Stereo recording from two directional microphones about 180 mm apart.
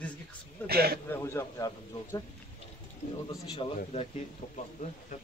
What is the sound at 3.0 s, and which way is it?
Speech, 45° left (ahead or behind).